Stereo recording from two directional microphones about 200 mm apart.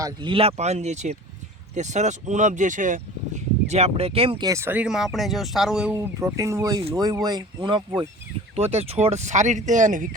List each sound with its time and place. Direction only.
0.0 s speech: 25° right (ahead or behind); by 10.1 s 40° right (ahead or behind)